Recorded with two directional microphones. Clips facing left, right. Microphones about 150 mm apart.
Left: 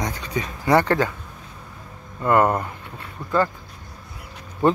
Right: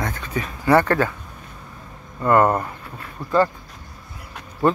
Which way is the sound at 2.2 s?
15° left (ahead or behind).